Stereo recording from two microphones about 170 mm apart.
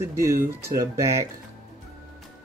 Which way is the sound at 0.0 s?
15° right (ahead or behind).